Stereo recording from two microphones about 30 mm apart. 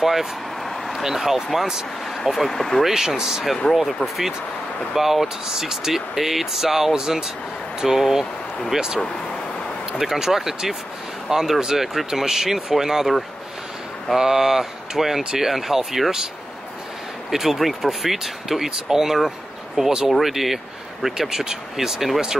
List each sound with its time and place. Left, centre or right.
0.0 s speech: centre
2.8 s speech: centre
3.6 s speech: centre
4.9 s speech: centre
7.8 s speech: centre
8.7 s speech: right
14.1 s speech: centre
17.3 s speech: centre
19.8 s speech: right
20.1 s speech: centre